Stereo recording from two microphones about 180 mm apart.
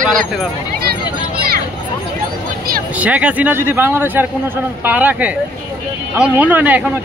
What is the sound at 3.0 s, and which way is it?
Speech, 5° right (ahead or behind).